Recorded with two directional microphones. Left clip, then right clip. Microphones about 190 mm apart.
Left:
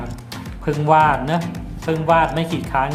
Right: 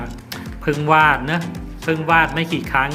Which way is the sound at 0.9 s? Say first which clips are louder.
Even; centre (ahead or behind).